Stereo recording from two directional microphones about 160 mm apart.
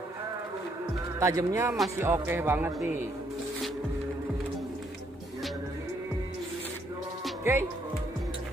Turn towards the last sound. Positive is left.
turn(degrees=-15)  # may be behind; listen again after turning